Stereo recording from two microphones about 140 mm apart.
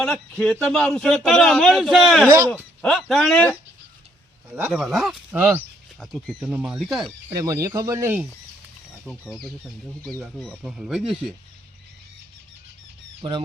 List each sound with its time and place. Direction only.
0.0 s a man's voice: 5° left (ahead or behind)
3.3 s speech: 10° left (ahead or behind)
4.7 s a man's voice: centre (ahead or behind)
5.3 s speech: 15° right (ahead or behind)
6.0 s a man's voice: 5° left (ahead or behind)
7.0 s speech: 25° right (ahead or behind)
9.0 s a man's voice: 10° left (ahead or behind)
13.2 s speech: 40° right (ahead or behind)